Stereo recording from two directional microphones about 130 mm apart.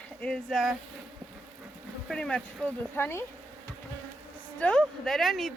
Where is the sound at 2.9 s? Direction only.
15° left (ahead or behind).